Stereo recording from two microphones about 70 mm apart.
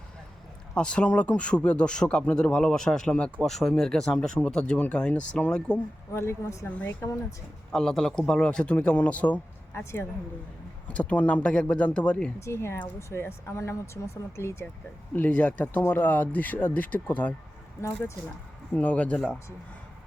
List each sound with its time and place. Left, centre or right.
0.7 s speech: centre
3.4 s speech: centre
6.1 s a woman's voice: left
7.7 s speech: centre
9.7 s speech: left
10.8 s speech: centre
12.4 s speech: left
15.1 s speech: left
17.7 s speech: left
18.7 s speech: left